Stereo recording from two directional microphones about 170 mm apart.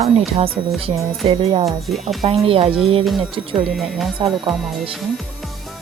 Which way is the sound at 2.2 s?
35° right (ahead or behind).